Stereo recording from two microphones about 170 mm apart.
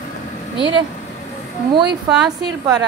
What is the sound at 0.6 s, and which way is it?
Speech, 30° right (ahead or behind).